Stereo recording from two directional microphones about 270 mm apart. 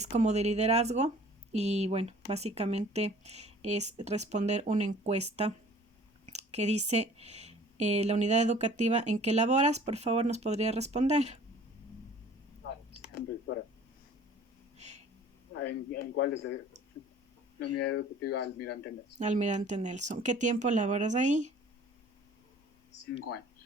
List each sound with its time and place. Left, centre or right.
0.0 s speech: right
14.8 s a sound: right
15.6 s a man's voice: left
17.6 s a man's voice: left
19.2 s speech: right